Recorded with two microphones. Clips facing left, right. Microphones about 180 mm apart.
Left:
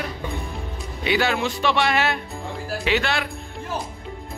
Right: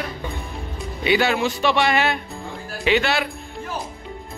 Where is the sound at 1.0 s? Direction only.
5° right (ahead or behind).